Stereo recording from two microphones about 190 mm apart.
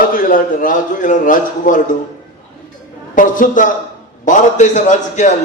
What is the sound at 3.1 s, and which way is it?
A man's voice, 45° left (ahead or behind).